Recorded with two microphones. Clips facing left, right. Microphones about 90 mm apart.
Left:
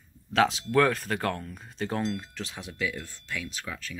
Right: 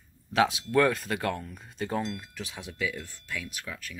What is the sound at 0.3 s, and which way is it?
Speech, 10° right (ahead or behind).